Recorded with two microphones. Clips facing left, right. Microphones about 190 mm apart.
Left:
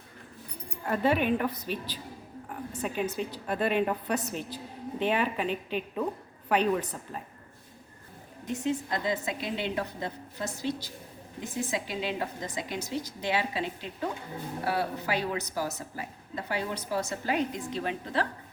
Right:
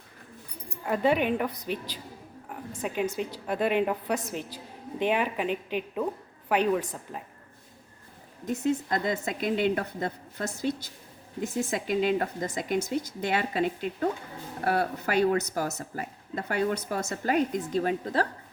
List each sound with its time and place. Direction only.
0.9 s a woman's voice: 15° right (ahead or behind)
8.6 s speech: 45° right (ahead or behind)
11.7 s speech: 50° right (ahead or behind)